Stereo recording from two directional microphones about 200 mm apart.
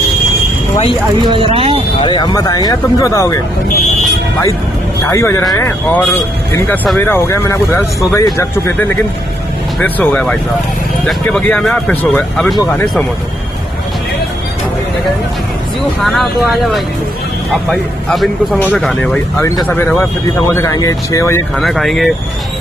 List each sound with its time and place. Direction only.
1.3 s speech: 30° right (ahead or behind)
2.0 s speech: 25° left (ahead or behind)
5.0 s speech: 15° left (ahead or behind)
16.0 s speech: centre (ahead or behind); by 21.4 s 15° left (ahead or behind)
21.5 s speech: centre (ahead or behind)